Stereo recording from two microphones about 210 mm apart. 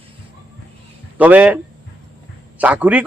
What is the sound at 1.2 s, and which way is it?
A man's voice, 5° right (ahead or behind).